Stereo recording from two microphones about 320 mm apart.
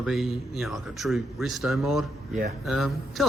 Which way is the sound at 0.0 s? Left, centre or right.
Centre.